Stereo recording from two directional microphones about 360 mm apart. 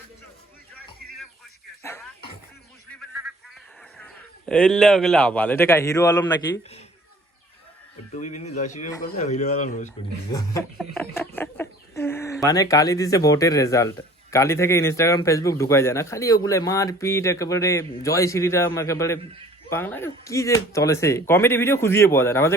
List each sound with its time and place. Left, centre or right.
1.8 s music: centre
3.9 s a man's voice: centre
8.1 s speech: centre